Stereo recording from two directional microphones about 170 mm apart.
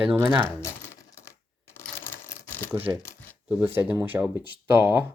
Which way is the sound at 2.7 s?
10° right (ahead or behind).